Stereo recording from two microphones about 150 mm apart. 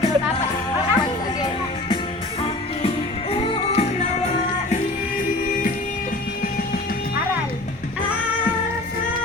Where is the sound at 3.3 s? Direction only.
35° left (ahead or behind).